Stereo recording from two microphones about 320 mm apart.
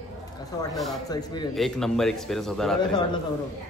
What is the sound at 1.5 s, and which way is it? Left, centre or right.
A man's voice, centre.